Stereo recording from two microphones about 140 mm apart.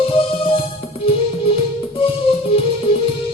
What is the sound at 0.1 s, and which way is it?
Music, 40° left (ahead or behind).